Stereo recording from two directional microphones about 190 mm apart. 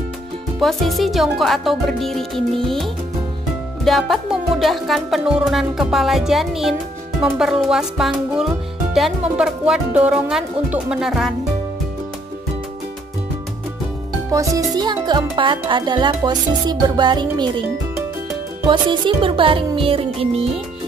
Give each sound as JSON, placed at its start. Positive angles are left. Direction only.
{"t": 0.6, "sound": "music", "side_deg": 0}
{"t": 14.3, "sound": "speech", "side_deg": -15}
{"t": 18.7, "sound": "speech", "side_deg": -25}